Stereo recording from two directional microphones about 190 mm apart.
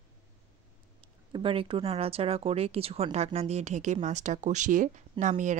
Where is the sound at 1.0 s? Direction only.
25° right (ahead or behind).